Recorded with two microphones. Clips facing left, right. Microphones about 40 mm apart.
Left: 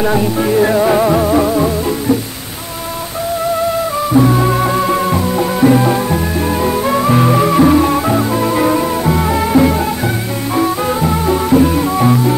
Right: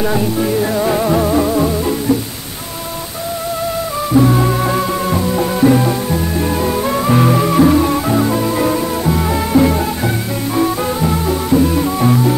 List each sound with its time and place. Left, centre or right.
0.0 s music: centre
4.1 s music: centre